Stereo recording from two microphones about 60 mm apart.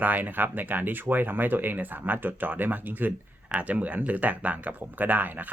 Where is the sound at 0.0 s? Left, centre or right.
Right.